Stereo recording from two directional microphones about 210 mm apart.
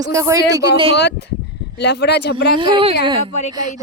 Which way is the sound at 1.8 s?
55° left (ahead or behind).